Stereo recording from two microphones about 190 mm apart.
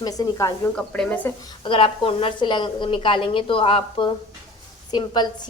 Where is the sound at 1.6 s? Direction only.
25° left (ahead or behind).